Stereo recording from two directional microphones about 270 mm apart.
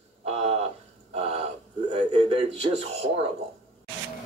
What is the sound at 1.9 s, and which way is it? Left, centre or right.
Speech, right.